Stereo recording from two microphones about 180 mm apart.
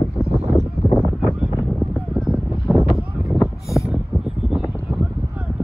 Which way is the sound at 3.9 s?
5° right (ahead or behind).